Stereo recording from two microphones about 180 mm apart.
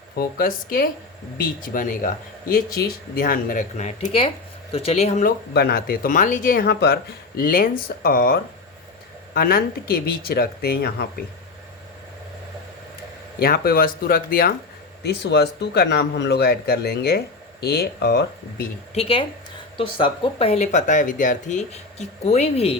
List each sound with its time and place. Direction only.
0.2 s speech: 55° left (ahead or behind)
5.5 s speech: 55° left (ahead or behind)
13.4 s speech: 55° left (ahead or behind)
15.0 s speech: 70° left (ahead or behind)
18.9 s speech: 30° left (ahead or behind)